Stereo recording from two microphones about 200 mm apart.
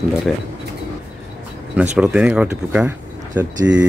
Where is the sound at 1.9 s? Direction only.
5° right (ahead or behind).